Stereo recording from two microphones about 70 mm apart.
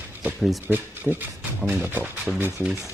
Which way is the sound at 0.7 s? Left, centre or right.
Right.